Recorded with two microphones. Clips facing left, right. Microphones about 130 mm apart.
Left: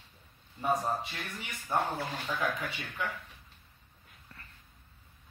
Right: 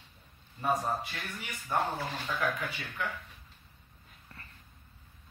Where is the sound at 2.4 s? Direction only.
20° left (ahead or behind).